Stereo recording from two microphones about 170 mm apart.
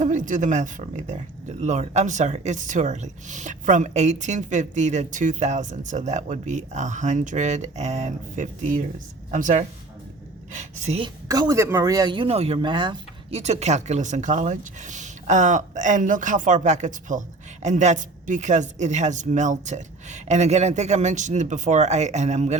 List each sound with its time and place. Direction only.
0.0 s a woman's voice: 45° right (ahead or behind)
11.3 s speech: 20° right (ahead or behind)
13.4 s speech: 40° right (ahead or behind)